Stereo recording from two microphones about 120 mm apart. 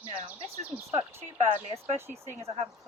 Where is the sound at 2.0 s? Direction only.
20° right (ahead or behind).